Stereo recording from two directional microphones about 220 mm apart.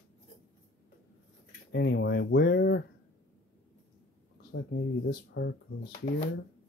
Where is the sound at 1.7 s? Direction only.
50° left (ahead or behind).